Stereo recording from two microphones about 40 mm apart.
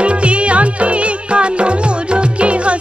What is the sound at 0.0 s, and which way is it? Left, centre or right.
Music, right.